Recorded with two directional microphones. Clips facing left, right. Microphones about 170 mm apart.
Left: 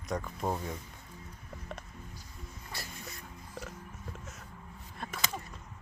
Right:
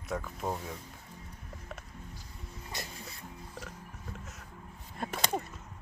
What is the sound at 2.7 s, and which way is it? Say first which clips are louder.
Dog: right 3 dB; 20° right (ahead or behind).